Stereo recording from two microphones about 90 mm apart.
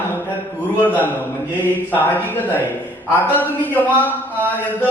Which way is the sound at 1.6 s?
20° left (ahead or behind).